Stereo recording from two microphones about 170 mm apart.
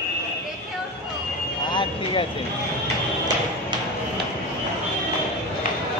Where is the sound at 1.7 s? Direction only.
30° left (ahead or behind).